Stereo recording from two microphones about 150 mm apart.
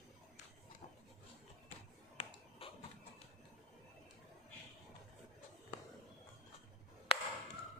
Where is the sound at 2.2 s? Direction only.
40° left (ahead or behind).